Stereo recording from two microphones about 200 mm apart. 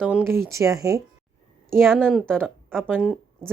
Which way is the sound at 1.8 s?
Centre (ahead or behind).